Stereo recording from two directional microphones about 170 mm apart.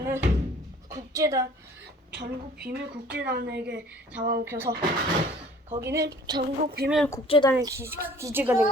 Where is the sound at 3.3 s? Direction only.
85° right.